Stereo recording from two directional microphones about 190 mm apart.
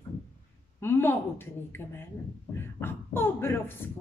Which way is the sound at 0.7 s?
10° left (ahead or behind).